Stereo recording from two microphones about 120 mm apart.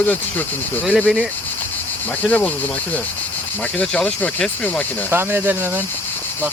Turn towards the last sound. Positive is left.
turn(degrees=-15)  # may be behind; listen again after turning